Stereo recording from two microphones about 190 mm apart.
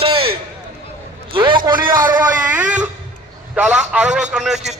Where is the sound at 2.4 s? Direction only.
10° right (ahead or behind).